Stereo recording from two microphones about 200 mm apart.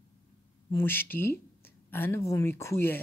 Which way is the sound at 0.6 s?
10° left (ahead or behind).